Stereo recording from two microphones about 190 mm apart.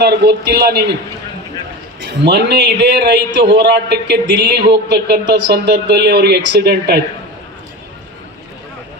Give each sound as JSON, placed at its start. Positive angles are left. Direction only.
{"t": 0.0, "sound": "speech", "side_deg": -60}
{"t": 2.0, "sound": "speech", "side_deg": -60}